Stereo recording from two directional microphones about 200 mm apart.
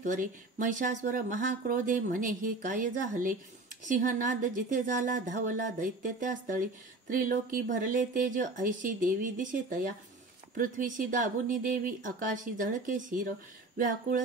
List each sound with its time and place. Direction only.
0.0 s speech: 40° right (ahead or behind)